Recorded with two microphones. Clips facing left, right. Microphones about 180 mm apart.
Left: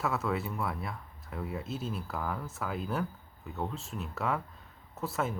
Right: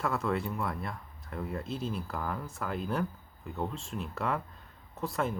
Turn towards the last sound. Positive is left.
turn(degrees=0)  # may be behind; listen again after turning